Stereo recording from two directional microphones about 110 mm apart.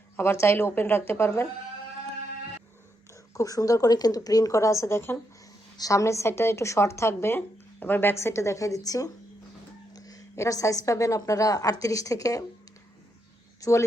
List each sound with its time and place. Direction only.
0.2 s a woman's voice: 20° left (ahead or behind)
3.3 s a woman's voice: 30° left (ahead or behind)
13.6 s speech: 30° left (ahead or behind)